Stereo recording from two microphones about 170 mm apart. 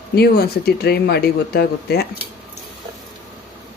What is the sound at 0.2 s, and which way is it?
Speech, 65° left (ahead or behind).